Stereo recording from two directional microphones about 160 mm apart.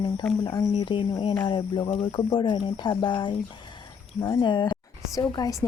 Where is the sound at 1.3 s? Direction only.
15° left (ahead or behind).